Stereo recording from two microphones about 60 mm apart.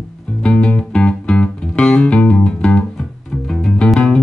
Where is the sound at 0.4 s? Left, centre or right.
Centre.